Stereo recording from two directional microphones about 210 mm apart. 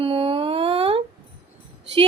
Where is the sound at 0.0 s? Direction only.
25° right (ahead or behind).